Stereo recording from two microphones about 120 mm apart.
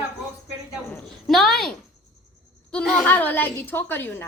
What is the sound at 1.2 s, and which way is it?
A woman's voice, centre (ahead or behind).